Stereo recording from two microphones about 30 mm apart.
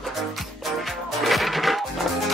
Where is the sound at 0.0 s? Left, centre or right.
Centre.